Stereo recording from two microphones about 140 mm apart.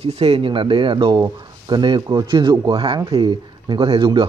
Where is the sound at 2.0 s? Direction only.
20° right (ahead or behind).